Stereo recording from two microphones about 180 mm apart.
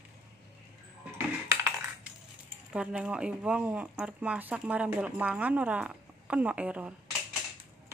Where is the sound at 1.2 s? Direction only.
15° right (ahead or behind).